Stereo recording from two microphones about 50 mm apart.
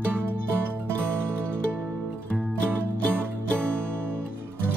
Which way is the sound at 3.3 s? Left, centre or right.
Right.